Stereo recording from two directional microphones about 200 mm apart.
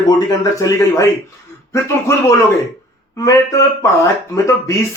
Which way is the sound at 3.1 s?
15° left (ahead or behind).